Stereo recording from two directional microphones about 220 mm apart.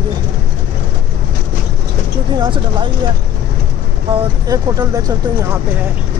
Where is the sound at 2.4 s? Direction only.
20° right (ahead or behind).